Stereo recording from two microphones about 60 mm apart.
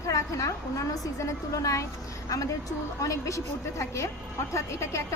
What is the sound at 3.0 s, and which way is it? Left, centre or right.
A woman's voice, left.